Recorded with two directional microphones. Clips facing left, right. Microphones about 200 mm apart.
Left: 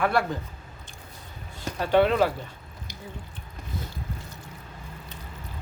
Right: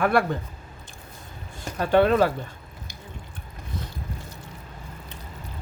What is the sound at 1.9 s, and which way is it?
Speech, 45° right (ahead or behind).